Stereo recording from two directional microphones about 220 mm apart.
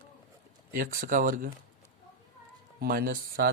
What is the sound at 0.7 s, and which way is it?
Speech, 40° right (ahead or behind).